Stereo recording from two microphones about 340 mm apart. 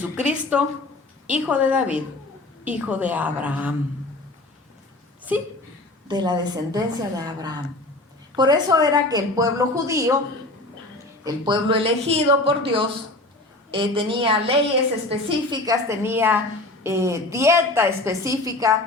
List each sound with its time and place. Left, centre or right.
0.0 s a woman's voice: centre
5.3 s a woman's voice: centre
11.2 s a woman's voice: centre